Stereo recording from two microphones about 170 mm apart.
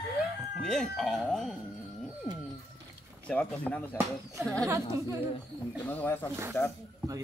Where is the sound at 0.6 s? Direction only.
5° left (ahead or behind).